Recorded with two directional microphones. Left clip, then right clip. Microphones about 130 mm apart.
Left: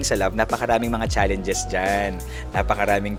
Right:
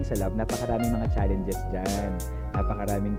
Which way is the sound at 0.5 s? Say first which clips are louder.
Left 7 dB; 25° left (ahead or behind).